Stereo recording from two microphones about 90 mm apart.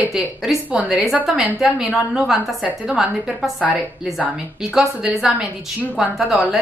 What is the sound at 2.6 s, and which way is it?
A woman's voice, 15° right (ahead or behind).